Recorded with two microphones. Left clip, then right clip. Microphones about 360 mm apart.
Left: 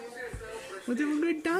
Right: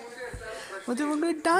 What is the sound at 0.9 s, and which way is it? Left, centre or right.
Speech, centre.